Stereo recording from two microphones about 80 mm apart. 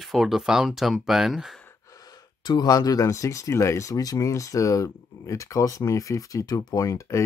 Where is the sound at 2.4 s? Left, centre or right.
Left.